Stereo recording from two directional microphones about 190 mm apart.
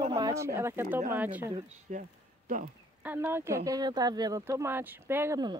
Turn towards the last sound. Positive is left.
turn(degrees=-20)  # may be behind; listen again after turning